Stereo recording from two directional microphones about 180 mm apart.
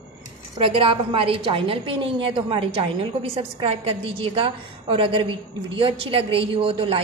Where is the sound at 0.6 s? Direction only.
30° right (ahead or behind).